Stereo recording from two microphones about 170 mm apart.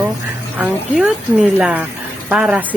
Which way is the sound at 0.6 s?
5° right (ahead or behind).